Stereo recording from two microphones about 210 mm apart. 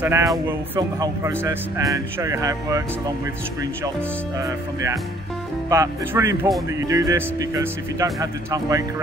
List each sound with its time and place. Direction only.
0.0 s speech: 10° right (ahead or behind)
4.4 s speech: 15° right (ahead or behind)